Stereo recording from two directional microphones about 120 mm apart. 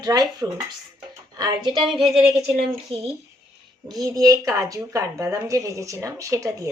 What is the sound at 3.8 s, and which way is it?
Speech, 35° right (ahead or behind).